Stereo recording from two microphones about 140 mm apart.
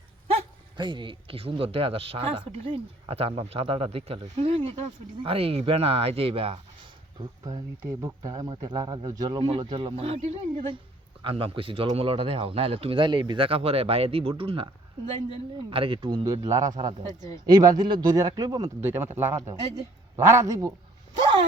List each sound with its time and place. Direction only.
0.8 s speech: 35° right (ahead or behind)
7.4 s a man's voice: 25° right (ahead or behind); by 14.7 s 40° right (ahead or behind)
15.7 s a man's voice: 40° right (ahead or behind)
18.8 s a man's voice: 15° right (ahead or behind)